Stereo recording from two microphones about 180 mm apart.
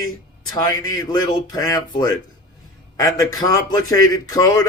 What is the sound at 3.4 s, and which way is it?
Speech, 20° left (ahead or behind).